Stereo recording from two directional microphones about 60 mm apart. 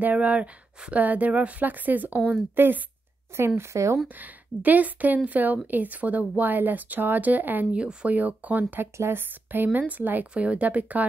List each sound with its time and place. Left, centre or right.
0.0 s speech: right
3.3 s speech: right
4.2 s speech: right
7.7 s speech: centre
8.9 s speech: right